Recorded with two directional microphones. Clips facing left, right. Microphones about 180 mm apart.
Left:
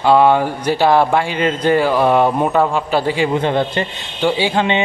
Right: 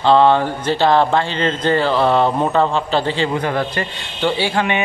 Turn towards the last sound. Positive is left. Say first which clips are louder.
# left 2 dB
turn(degrees=20)  # may be behind; listen again after turning